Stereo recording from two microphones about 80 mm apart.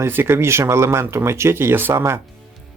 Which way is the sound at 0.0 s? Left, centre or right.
Right.